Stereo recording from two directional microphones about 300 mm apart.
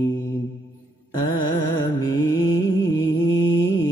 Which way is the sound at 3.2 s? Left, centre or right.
Left.